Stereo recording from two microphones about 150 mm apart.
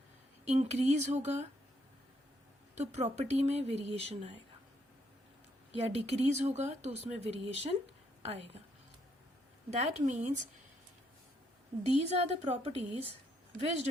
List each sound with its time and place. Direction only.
0.4 s speech: 45° right (ahead or behind)
2.7 s speech: 50° right (ahead or behind)
5.8 s speech: 45° right (ahead or behind)
9.6 s speech: 45° right (ahead or behind)
11.9 s speech: 45° right (ahead or behind)